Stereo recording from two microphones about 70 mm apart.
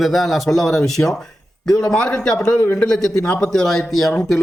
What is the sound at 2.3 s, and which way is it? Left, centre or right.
Speech, left.